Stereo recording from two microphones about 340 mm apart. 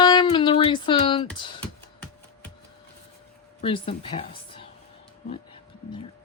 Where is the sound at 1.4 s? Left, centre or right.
Centre.